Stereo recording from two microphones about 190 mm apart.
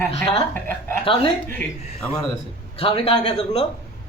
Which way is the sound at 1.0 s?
30° left (ahead or behind).